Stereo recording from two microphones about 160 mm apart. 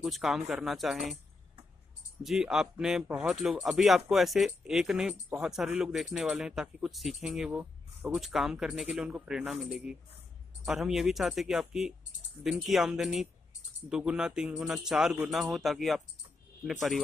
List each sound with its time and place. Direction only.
0.0 s speech: centre (ahead or behind)
2.2 s speech: 5° right (ahead or behind)